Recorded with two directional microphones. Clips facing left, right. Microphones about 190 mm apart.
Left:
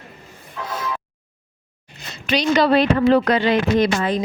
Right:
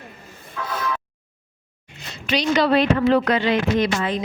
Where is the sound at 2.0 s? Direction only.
40° left (ahead or behind).